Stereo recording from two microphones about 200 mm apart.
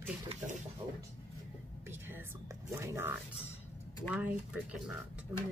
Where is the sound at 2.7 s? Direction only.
10° right (ahead or behind).